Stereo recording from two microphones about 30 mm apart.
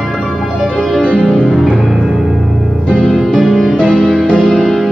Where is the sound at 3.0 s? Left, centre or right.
Left.